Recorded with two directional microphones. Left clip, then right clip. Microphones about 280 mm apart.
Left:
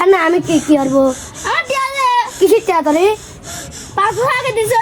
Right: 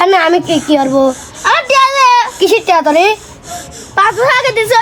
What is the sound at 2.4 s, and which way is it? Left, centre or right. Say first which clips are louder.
Speech: right 2 dB; right.